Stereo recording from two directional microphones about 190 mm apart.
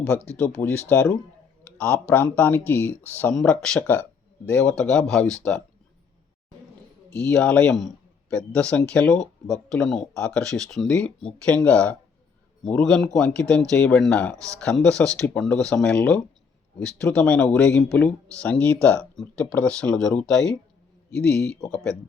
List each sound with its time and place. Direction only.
0.1 s speech: 10° left (ahead or behind)
7.3 s a man's voice: 5° left (ahead or behind)
14.3 s speech: 15° right (ahead or behind)
14.6 s speech: 5° left (ahead or behind)